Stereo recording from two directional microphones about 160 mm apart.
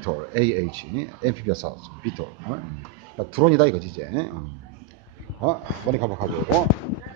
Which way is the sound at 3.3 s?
30° right (ahead or behind).